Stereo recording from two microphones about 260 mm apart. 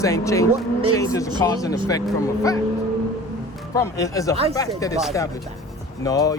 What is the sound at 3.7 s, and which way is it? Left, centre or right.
Speech, centre.